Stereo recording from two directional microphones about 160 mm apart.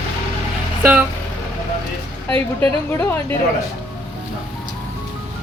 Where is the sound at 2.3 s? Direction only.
10° left (ahead or behind).